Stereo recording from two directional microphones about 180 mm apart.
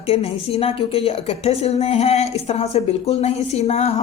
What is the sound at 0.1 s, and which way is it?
A woman's voice, 35° left (ahead or behind).